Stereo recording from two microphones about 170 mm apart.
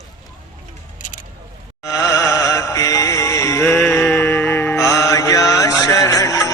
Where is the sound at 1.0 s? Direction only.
50° left (ahead or behind).